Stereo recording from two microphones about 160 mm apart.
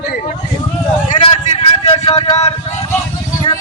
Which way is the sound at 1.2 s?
35° left (ahead or behind).